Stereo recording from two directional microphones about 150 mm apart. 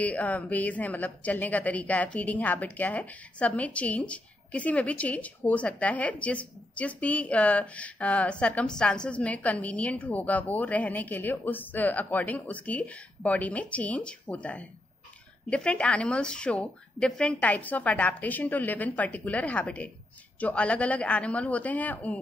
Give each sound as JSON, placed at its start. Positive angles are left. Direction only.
{"t": 0.0, "sound": "a woman's voice", "side_deg": 10}